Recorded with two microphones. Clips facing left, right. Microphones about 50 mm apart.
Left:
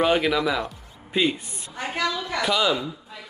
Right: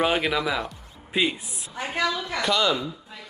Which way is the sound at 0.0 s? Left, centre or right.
Centre.